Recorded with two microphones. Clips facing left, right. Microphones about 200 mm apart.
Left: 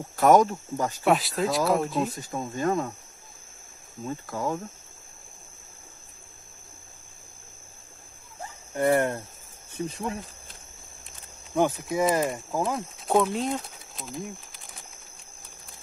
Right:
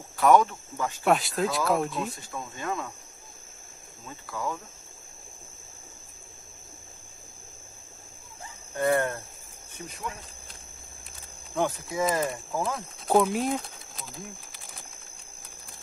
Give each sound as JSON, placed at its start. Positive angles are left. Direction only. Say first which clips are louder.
{"t": 0.1, "sound": "speech", "louder": "left 2 dB", "side_deg": 45}
{"t": 1.0, "sound": "speech", "louder": "even", "side_deg": 0}
{"t": 2.1, "sound": "speech", "louder": "left 7 dB", "side_deg": 40}
{"t": 4.0, "sound": "speech", "louder": "left 4 dB", "side_deg": 45}
{"t": 8.7, "sound": "speech", "louder": "left 2 dB", "side_deg": 20}
{"t": 9.8, "sound": "speech", "louder": "left 5 dB", "side_deg": 30}
{"t": 11.5, "sound": "speech", "louder": "left 4 dB", "side_deg": 20}
{"t": 13.0, "sound": "speech", "louder": "right 1 dB", "side_deg": -5}